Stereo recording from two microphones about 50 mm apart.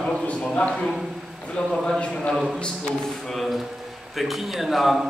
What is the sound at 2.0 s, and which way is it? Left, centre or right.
Speech, left.